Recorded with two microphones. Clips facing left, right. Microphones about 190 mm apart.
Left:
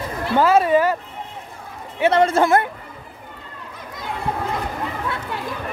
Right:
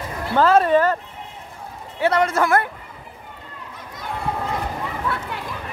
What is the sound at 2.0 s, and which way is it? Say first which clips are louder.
Speech: left 3 dB; 25° left (ahead or behind).